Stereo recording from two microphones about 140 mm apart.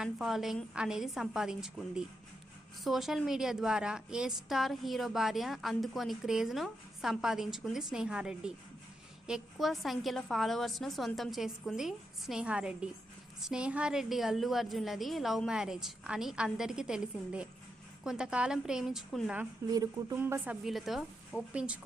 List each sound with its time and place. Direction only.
0.0 s a woman's voice: centre (ahead or behind)
19.7 s speech: 25° right (ahead or behind)
20.1 s speech: 15° right (ahead or behind)
20.7 s a woman's voice: centre (ahead or behind)